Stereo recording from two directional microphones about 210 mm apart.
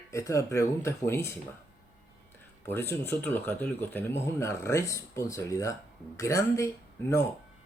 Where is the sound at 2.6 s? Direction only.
10° left (ahead or behind).